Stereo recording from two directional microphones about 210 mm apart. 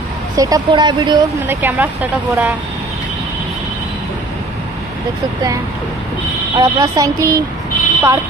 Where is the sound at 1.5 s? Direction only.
10° right (ahead or behind).